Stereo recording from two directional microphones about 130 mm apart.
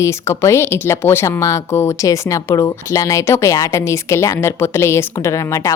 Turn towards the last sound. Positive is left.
turn(degrees=25)  # may be behind; listen again after turning